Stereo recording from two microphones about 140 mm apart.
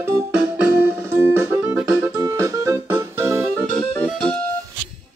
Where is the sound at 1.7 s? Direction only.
10° right (ahead or behind).